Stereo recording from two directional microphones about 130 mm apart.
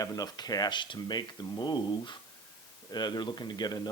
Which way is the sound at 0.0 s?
30° left (ahead or behind).